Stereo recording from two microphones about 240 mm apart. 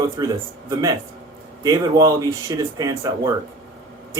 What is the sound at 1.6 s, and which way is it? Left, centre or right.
Speech, centre.